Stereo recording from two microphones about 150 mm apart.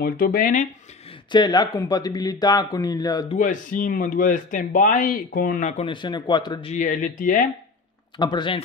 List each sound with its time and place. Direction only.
0.0 s speech: 85° left; by 0.7 s 70° left (ahead or behind)
1.3 s speech: 30° left (ahead or behind)
3.3 s speech: 60° left (ahead or behind)
5.7 s a man's voice: 45° left (ahead or behind)
5.9 s speech: 30° left (ahead or behind)
6.7 s speech: 60° left (ahead or behind)
8.2 s speech: 30° left (ahead or behind)